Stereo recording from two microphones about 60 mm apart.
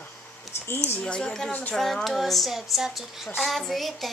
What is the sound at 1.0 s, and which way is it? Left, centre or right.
Speech, centre.